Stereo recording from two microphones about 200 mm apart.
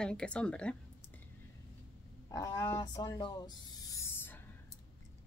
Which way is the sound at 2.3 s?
15° left (ahead or behind).